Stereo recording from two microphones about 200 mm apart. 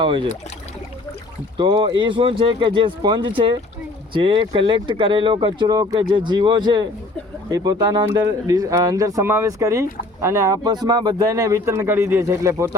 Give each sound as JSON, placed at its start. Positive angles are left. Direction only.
{"t": 0.0, "sound": "speech", "side_deg": -25}
{"t": 1.5, "sound": "speech", "side_deg": -25}